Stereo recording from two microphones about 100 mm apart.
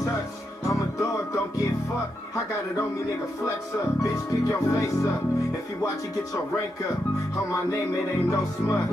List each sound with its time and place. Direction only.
0.7 s music: 30° left (ahead or behind)
4.0 s speech: 30° left (ahead or behind)
8.3 s speech: 30° left (ahead or behind)